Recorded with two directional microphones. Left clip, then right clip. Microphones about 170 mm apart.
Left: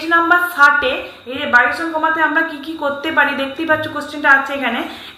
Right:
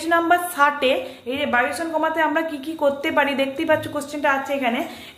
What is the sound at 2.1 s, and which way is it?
A woman's voice, 35° right (ahead or behind).